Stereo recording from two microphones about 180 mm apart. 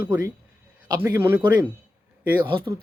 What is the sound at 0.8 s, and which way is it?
Speech, 20° right (ahead or behind).